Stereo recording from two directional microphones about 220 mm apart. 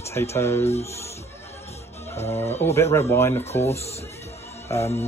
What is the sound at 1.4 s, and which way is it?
Music, 30° left (ahead or behind).